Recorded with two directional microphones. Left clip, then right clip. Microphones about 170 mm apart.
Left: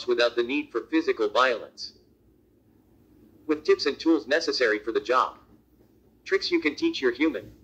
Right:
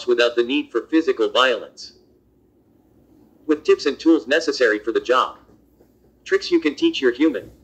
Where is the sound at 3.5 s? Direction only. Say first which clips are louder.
Right 6 dB; 20° right (ahead or behind).